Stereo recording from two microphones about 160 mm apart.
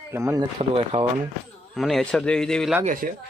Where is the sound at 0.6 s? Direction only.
40° right (ahead or behind).